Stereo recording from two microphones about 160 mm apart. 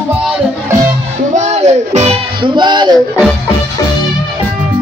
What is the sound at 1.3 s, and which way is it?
Music, 45° right (ahead or behind).